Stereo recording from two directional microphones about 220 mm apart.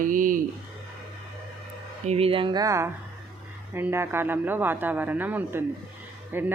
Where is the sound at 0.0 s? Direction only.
35° right (ahead or behind).